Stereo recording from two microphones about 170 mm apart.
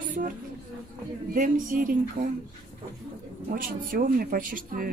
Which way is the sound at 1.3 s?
50° right (ahead or behind).